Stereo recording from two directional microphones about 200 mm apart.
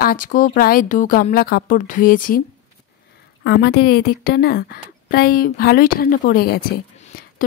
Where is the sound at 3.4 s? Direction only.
55° left (ahead or behind).